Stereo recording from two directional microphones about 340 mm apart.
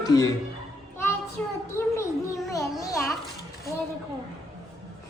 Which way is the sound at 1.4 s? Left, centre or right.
Centre.